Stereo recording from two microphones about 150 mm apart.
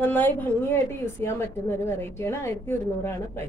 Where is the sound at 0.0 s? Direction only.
15° left (ahead or behind).